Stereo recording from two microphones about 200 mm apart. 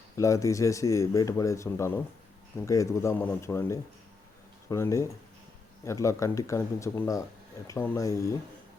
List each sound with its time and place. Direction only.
0.2 s speech: 15° left (ahead or behind)